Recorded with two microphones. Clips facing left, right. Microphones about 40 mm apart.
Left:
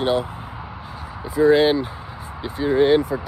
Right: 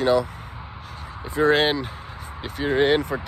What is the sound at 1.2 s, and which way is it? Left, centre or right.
Speech, right.